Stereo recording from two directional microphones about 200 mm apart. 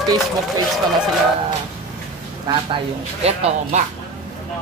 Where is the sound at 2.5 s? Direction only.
20° right (ahead or behind).